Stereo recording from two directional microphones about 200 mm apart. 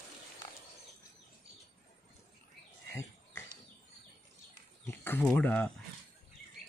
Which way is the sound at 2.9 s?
15° left (ahead or behind).